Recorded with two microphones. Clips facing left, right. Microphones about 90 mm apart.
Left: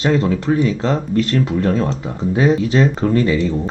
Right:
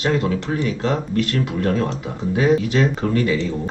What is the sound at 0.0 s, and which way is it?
Speech, 40° left (ahead or behind).